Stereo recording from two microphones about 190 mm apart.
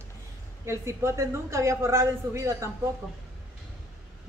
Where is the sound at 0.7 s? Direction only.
15° right (ahead or behind).